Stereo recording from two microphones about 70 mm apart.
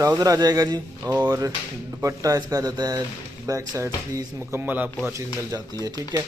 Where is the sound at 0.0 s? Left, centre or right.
Right.